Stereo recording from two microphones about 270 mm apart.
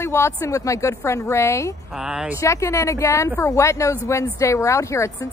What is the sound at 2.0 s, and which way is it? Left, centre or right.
Speech, centre.